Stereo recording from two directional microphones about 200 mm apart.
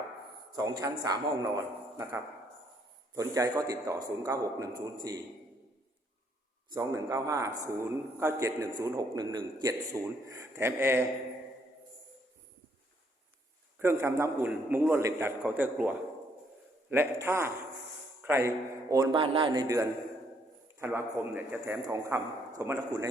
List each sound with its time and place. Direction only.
0.5 s a man's voice: 20° right (ahead or behind)
3.2 s a man's voice: 15° right (ahead or behind)
6.7 s a man's voice: 15° right (ahead or behind)
13.7 s a man's voice: 10° right (ahead or behind)